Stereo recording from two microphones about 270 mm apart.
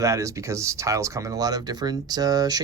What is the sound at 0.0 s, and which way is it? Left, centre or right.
Speech, centre.